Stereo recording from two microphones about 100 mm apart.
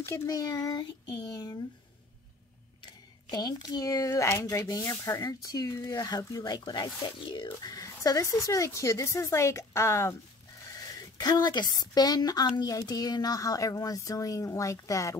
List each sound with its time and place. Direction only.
0.3 s speech: 40° left (ahead or behind)
2.8 s speech: 45° left (ahead or behind)
7.2 s speech: 60° left (ahead or behind)
7.6 s speech: 35° left (ahead or behind)